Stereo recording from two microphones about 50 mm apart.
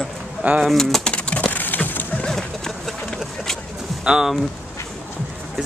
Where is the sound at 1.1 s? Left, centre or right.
Left.